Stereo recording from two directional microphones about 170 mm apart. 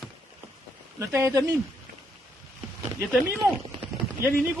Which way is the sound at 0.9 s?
20° right (ahead or behind).